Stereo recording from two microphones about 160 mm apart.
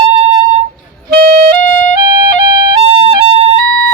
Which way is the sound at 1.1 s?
60° right (ahead or behind).